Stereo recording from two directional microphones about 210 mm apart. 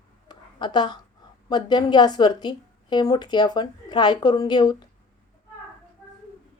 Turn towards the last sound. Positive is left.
turn(degrees=20)  # may be behind; listen again after turning